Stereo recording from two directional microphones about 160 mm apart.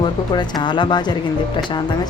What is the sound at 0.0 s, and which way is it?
Speech, 30° left (ahead or behind).